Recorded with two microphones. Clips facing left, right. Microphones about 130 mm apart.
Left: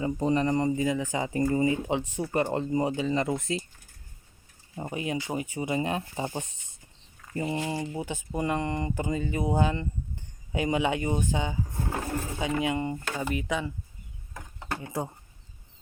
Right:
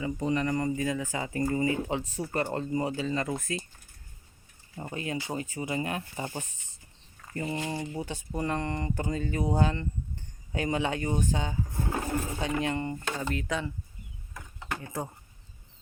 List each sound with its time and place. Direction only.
0.0 s speech: 35° left (ahead or behind)
4.7 s speech: 20° left (ahead or behind)
14.8 s speech: 15° left (ahead or behind)